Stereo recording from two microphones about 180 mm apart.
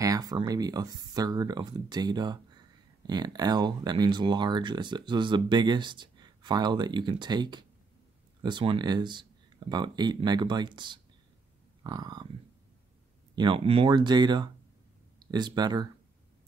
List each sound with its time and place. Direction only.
0.0 s speech: 20° right (ahead or behind)
13.4 s speech: 30° right (ahead or behind)